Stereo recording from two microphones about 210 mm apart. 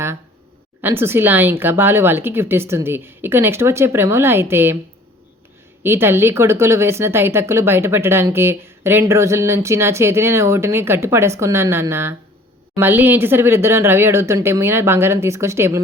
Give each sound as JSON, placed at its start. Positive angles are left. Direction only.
{"t": 0.8, "sound": "speech", "side_deg": -10}
{"t": 5.8, "sound": "speech", "side_deg": -10}